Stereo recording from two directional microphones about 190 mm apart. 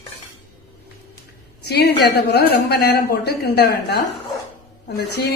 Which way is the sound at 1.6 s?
60° left (ahead or behind).